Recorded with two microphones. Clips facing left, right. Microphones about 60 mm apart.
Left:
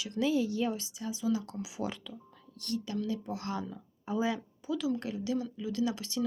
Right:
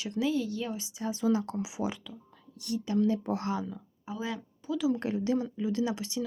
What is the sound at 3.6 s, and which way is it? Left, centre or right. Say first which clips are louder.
Speech: right 2 dB; centre.